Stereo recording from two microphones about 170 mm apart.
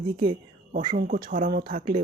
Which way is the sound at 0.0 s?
25° right (ahead or behind).